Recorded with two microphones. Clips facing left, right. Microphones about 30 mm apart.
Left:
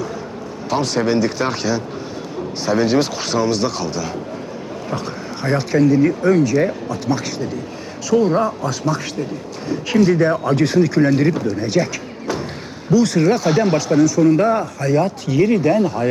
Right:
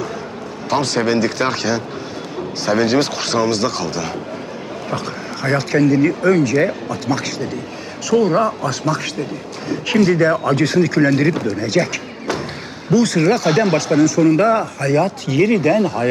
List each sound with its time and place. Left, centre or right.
0.7 s a man's voice: centre
8.4 s speech: centre
11.3 s speech: centre
11.5 s a sound: centre
13.1 s speech: centre